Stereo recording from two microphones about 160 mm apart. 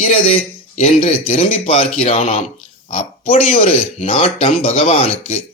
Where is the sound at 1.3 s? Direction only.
35° left (ahead or behind).